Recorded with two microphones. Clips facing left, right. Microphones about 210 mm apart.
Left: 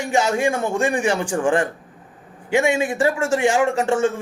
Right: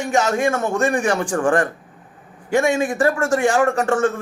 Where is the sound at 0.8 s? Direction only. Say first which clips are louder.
Right 1 dB; 10° left (ahead or behind).